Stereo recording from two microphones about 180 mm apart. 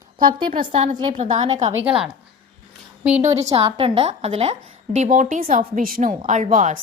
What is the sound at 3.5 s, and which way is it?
A woman's voice, 35° right (ahead or behind).